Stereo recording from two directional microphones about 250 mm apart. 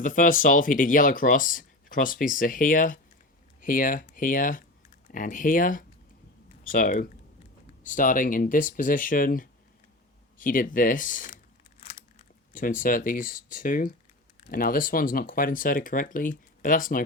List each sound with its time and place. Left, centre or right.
0.0 s speech: left
12.5 s speech: left